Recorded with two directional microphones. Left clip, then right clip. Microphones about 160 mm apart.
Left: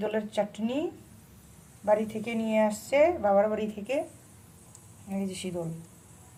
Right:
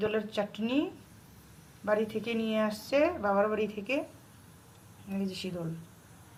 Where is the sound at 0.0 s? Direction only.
25° left (ahead or behind).